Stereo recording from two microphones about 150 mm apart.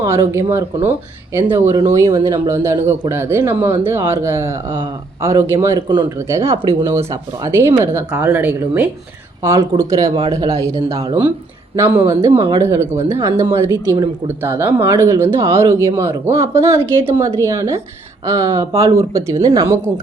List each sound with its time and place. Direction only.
0.0 s speech: 20° right (ahead or behind)